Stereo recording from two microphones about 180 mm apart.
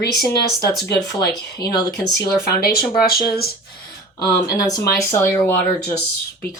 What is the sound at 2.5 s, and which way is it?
Speech, 60° left (ahead or behind).